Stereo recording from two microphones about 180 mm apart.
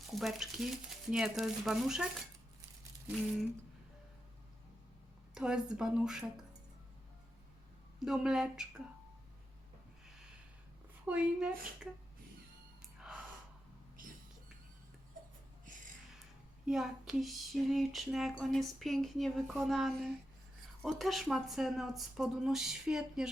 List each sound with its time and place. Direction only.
0.1 s female singing: centre (ahead or behind)
5.3 s female singing: 5° right (ahead or behind)
7.9 s female singing: centre (ahead or behind)
11.0 s female singing: 5° right (ahead or behind)
14.0 s whispering: 50° right (ahead or behind)
16.6 s female singing: centre (ahead or behind)